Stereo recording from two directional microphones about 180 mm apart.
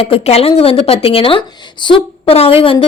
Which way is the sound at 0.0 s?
35° left (ahead or behind).